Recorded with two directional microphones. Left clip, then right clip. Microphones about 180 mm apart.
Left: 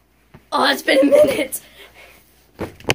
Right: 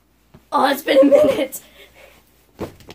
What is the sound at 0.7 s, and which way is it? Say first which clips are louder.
A woman's voice: even; 35° right (ahead or behind).